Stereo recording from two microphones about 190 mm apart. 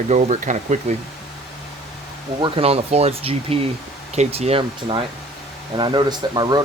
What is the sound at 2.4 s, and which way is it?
Speech, 30° right (ahead or behind).